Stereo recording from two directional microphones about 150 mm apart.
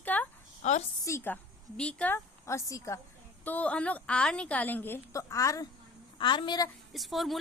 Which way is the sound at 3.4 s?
10° left (ahead or behind).